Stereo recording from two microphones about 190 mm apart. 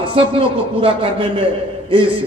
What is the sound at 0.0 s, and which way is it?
A man's voice, 30° right (ahead or behind).